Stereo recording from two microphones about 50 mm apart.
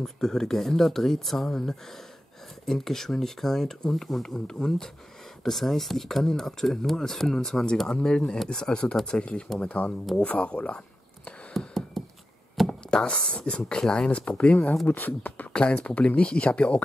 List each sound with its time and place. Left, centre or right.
0.0 s speech: centre
11.5 s a sound: centre
12.6 s speech: left
15.5 s speech: left